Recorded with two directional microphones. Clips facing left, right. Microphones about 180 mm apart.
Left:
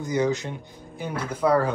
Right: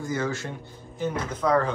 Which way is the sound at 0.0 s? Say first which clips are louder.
Left 4 dB; 20° left (ahead or behind).